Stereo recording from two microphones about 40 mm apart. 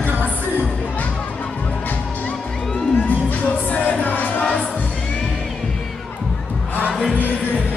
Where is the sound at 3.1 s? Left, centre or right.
Left.